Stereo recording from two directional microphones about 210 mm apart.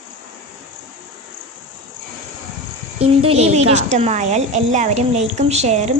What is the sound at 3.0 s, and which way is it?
A woman's voice, 30° right (ahead or behind).